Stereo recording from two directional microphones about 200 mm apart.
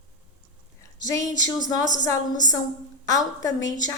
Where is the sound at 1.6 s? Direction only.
40° left (ahead or behind).